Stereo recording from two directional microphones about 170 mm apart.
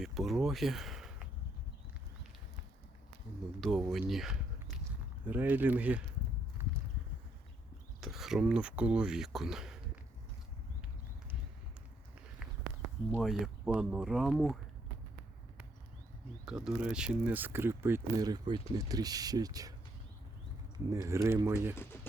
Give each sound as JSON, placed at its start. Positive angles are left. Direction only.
{"t": 0.0, "sound": "speech", "side_deg": 0}
{"t": 3.6, "sound": "speech", "side_deg": 0}
{"t": 8.0, "sound": "speech", "side_deg": 0}
{"t": 13.1, "sound": "speech", "side_deg": 0}
{"t": 16.5, "sound": "speech", "side_deg": -5}
{"t": 20.7, "sound": "speech", "side_deg": -20}